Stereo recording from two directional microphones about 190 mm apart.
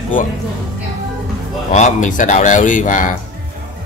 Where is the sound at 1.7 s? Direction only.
40° left (ahead or behind).